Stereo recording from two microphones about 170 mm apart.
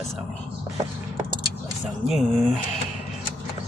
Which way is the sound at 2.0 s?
Centre (ahead or behind).